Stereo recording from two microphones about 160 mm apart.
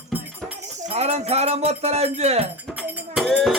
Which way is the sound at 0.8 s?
40° right (ahead or behind).